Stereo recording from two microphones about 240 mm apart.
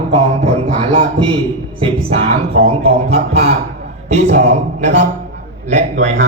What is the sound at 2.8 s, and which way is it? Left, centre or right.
A man's voice, right.